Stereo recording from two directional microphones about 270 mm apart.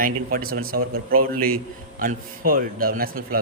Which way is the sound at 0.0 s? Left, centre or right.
Right.